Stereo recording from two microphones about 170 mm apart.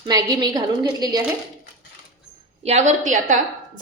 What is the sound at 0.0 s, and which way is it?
A woman's voice, 20° right (ahead or behind).